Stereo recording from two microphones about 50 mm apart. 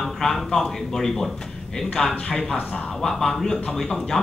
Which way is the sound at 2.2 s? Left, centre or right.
Centre.